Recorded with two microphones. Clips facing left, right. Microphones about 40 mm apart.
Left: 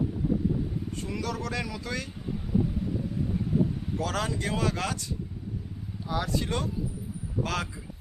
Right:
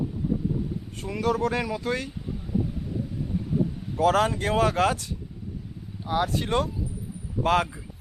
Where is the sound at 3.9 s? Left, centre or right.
Right.